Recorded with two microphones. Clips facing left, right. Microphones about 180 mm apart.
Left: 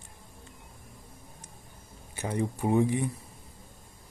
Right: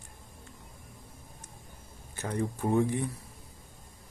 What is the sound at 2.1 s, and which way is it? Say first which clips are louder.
Speech: left 2 dB; 15° left (ahead or behind).